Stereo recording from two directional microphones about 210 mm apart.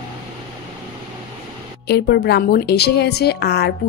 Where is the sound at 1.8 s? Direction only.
50° left (ahead or behind).